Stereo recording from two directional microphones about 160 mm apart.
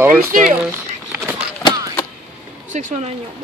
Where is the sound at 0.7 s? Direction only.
15° right (ahead or behind).